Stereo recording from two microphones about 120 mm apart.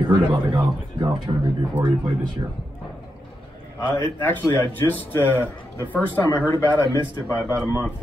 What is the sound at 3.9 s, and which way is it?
A man's voice, 20° left (ahead or behind).